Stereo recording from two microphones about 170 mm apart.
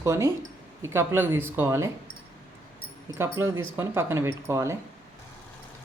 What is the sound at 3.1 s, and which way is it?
Speech, 15° right (ahead or behind).